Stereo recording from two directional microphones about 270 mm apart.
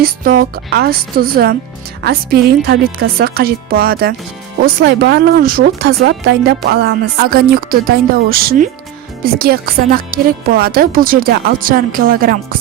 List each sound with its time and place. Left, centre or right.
0.0 s speech: right